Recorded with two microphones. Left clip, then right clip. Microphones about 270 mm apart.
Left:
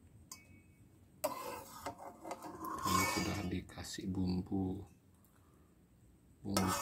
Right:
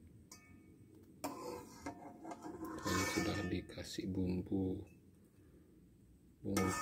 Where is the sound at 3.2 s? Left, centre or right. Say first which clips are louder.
Right 1 dB; centre.